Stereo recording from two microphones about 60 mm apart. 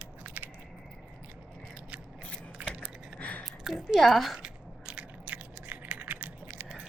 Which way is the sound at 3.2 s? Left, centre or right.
Left.